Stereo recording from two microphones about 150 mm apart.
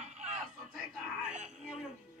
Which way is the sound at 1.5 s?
5° right (ahead or behind).